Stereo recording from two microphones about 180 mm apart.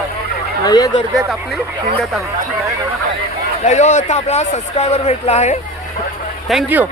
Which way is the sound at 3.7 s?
40° left (ahead or behind).